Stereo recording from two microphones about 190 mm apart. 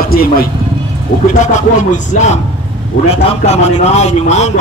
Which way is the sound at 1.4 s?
40° left (ahead or behind).